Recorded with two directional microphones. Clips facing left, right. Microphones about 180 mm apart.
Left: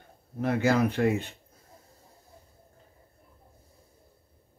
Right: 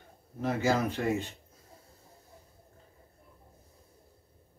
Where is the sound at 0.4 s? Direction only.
60° left (ahead or behind).